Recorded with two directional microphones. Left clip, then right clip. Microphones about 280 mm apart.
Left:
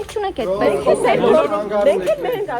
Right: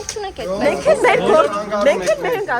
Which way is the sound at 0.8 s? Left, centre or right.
Right.